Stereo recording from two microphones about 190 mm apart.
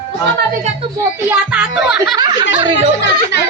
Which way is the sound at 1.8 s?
5° right (ahead or behind).